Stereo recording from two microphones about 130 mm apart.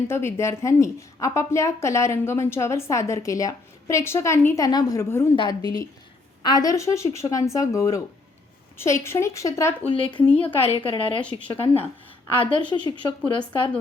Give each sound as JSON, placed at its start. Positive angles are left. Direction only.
{"t": 0.1, "sound": "a woman's voice", "side_deg": 20}
{"t": 9.9, "sound": "a woman's voice", "side_deg": 40}